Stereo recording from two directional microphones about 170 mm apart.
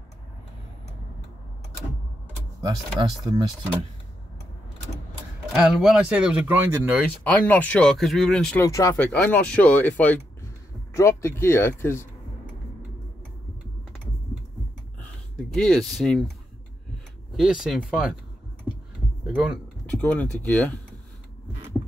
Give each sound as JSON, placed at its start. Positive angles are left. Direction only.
{"t": 2.6, "sound": "speech", "side_deg": -25}
{"t": 5.5, "sound": "speech", "side_deg": -5}
{"t": 7.3, "sound": "speech", "side_deg": 10}
{"t": 8.5, "sound": "speech", "side_deg": 20}
{"t": 8.9, "sound": "speech", "side_deg": 10}
{"t": 15.3, "sound": "speech", "side_deg": 5}
{"t": 17.4, "sound": "speech", "side_deg": -5}
{"t": 19.2, "sound": "speech", "side_deg": -5}
{"t": 20.1, "sound": "speech", "side_deg": 10}